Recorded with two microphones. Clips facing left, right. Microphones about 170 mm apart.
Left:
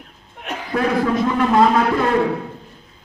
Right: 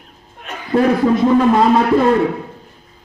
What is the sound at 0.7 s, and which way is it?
Speech, 25° right (ahead or behind).